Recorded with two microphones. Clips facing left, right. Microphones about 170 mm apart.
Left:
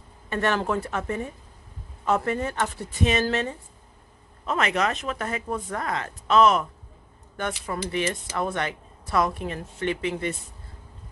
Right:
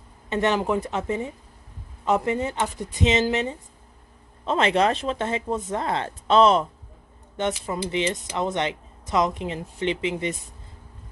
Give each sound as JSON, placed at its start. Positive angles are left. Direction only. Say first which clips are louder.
{"t": 0.3, "sound": "a woman's voice", "louder": "right 2 dB", "side_deg": -20}
{"t": 4.5, "sound": "speech", "louder": "right 4 dB", "side_deg": -30}